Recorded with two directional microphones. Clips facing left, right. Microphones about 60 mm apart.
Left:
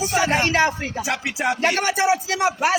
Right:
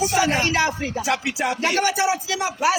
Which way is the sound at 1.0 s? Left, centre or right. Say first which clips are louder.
Even; left.